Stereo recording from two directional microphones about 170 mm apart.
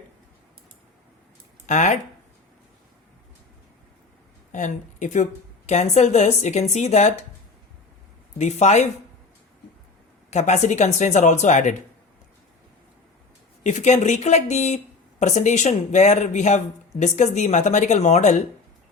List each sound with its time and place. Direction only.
1.6 s speech: 45° left (ahead or behind)
4.5 s a woman's voice: 45° left (ahead or behind)
8.4 s a woman's voice: 40° left (ahead or behind)
10.2 s speech: 45° left (ahead or behind)
13.7 s a woman's voice: 45° left (ahead or behind)